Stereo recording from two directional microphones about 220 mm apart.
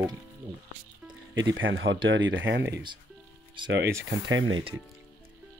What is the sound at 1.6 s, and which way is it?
Speech, 60° right (ahead or behind).